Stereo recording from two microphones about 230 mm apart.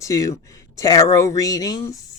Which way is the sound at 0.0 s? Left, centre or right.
Centre.